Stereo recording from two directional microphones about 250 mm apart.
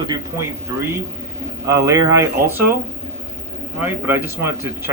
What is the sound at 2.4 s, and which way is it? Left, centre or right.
Speech, right.